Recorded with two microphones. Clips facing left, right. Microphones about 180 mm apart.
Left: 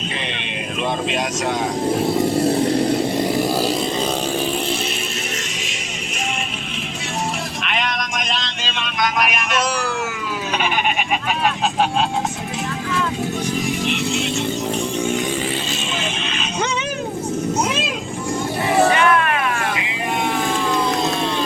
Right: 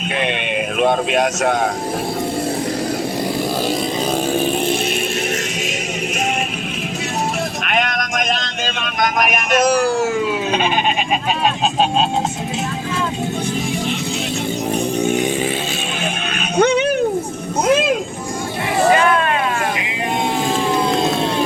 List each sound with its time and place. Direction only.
0.2 s a sound: 55° right (ahead or behind)
7.6 s vehicle: 50° right (ahead or behind)
11.4 s speech: 20° right (ahead or behind)
16.6 s a sound: 60° right (ahead or behind)
17.7 s music: 50° right (ahead or behind)
18.9 s vehicle: 30° right (ahead or behind)